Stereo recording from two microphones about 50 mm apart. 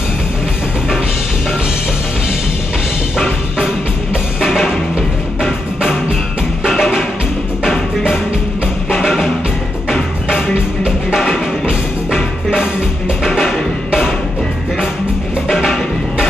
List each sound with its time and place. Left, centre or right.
3.5 s music: centre
4.4 s music: centre
6.6 s music: centre
9.0 s music: centre
10.5 s music: right
13.2 s music: centre
15.4 s music: centre